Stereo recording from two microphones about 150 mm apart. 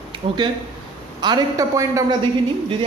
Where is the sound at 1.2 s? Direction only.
25° right (ahead or behind).